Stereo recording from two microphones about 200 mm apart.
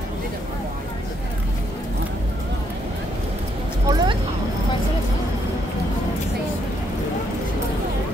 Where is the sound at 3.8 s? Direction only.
20° right (ahead or behind).